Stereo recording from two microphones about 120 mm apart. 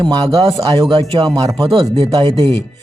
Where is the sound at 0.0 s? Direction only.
35° right (ahead or behind).